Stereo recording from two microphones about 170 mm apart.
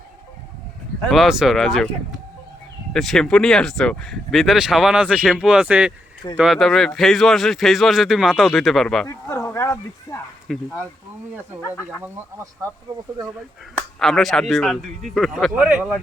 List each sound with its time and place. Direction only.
1.0 s speech: centre (ahead or behind)
2.9 s speech: centre (ahead or behind)
9.0 s speech: 20° left (ahead or behind)
10.5 s speech: centre (ahead or behind)
13.7 s speech: centre (ahead or behind)